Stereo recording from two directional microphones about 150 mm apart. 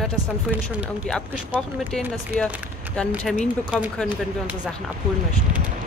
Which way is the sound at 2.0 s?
5° left (ahead or behind).